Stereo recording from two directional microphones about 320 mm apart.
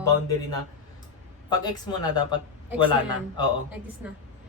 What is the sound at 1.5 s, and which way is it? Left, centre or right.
Speech, centre.